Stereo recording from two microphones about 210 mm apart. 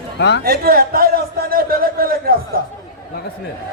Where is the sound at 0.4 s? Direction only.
45° right (ahead or behind).